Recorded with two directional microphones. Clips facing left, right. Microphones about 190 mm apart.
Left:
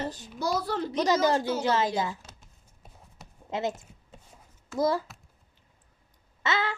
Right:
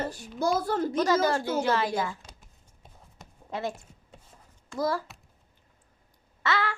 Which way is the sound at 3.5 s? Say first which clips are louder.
Left 2 dB; 20° left (ahead or behind).